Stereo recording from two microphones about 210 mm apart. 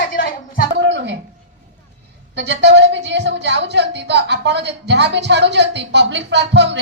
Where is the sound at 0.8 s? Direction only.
55° right (ahead or behind).